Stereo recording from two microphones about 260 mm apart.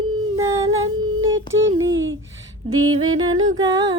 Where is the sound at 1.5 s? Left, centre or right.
Right.